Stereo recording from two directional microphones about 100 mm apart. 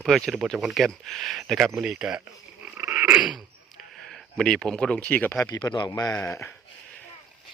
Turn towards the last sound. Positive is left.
turn(degrees=30)  # may be behind; listen again after turning